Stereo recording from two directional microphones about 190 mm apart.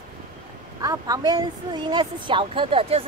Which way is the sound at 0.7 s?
20° right (ahead or behind).